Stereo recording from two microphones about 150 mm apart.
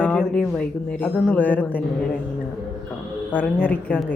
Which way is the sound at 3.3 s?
10° left (ahead or behind).